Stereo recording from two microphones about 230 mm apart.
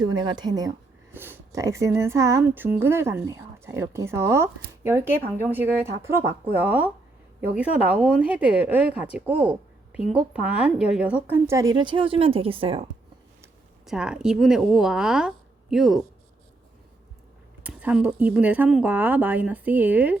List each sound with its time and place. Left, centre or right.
0.0 s a woman's voice: centre
13.8 s a woman's voice: centre
17.6 s speech: centre